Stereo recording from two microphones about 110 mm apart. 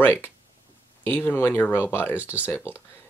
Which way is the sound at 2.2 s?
15° right (ahead or behind).